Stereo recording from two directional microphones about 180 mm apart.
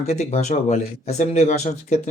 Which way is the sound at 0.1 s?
40° left (ahead or behind).